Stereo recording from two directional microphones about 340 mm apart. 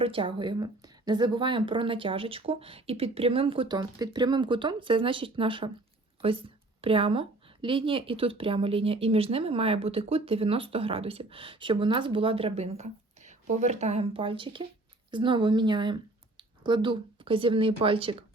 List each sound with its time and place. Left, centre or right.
0.0 s a woman's voice: centre
6.8 s a woman's voice: centre